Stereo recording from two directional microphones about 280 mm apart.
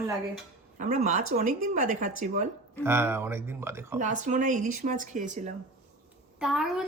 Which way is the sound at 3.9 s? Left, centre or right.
Right.